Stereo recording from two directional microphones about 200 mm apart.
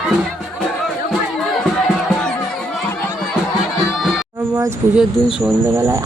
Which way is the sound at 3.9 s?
Centre (ahead or behind).